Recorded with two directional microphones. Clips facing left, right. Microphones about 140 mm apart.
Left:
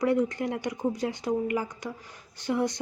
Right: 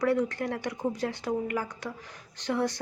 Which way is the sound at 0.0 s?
15° left (ahead or behind).